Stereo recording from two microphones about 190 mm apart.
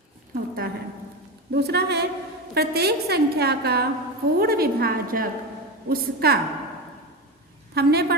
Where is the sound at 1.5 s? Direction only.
60° right (ahead or behind).